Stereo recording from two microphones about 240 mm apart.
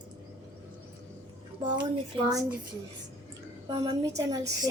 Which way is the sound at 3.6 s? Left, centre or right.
Centre.